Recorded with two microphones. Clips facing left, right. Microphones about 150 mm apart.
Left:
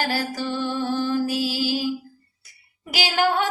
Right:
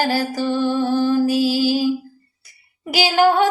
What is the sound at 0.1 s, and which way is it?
Music, 40° right (ahead or behind).